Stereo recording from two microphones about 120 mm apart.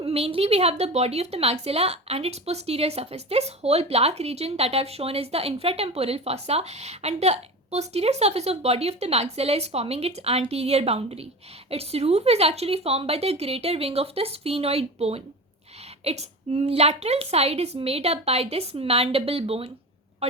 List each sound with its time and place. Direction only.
0.0 s a woman's voice: 55° right (ahead or behind)